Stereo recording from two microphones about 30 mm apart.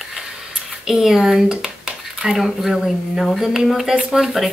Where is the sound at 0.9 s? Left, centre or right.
Centre.